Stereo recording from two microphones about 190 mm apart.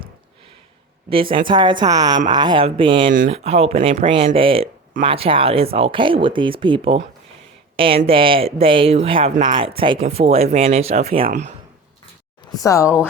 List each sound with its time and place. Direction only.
1.1 s speech: 25° right (ahead or behind)
3.1 s speech: 40° right (ahead or behind)
12.5 s speech: 15° left (ahead or behind)